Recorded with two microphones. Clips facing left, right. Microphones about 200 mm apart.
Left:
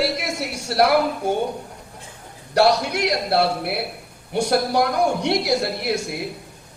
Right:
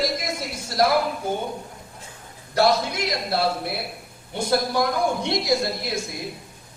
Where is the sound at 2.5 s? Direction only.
70° left (ahead or behind).